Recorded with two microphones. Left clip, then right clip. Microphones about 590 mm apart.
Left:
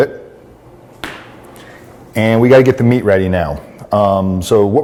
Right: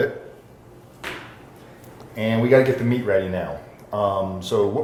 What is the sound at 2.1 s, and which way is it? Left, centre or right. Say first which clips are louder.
Speech: left 11 dB; left.